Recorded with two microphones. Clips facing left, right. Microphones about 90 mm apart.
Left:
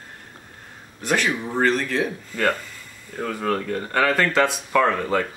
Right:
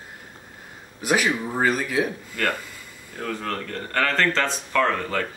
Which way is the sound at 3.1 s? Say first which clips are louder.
Left 5 dB; 5° left (ahead or behind).